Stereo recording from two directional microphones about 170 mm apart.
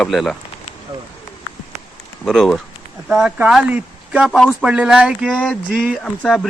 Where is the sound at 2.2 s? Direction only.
5° left (ahead or behind).